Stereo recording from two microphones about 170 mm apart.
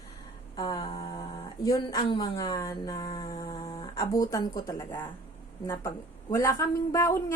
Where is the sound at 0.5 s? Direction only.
20° left (ahead or behind).